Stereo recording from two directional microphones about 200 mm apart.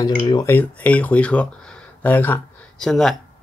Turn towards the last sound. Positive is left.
turn(degrees=0)  # may be behind; listen again after turning